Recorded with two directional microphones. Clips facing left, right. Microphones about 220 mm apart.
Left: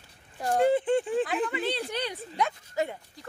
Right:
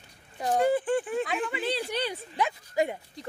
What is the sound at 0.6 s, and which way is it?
Speech, 25° left (ahead or behind).